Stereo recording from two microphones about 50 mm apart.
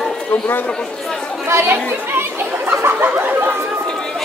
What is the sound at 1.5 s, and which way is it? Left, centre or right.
Chatter, right.